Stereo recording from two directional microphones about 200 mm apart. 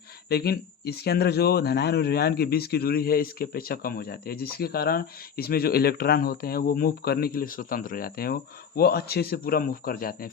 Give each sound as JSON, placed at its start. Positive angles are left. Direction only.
{"t": 0.3, "sound": "speech", "side_deg": 50}